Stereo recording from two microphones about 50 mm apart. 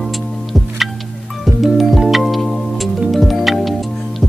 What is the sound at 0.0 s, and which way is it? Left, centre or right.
Music, centre.